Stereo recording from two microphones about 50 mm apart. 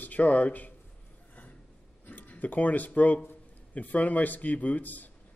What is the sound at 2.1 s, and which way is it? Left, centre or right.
Speech, left.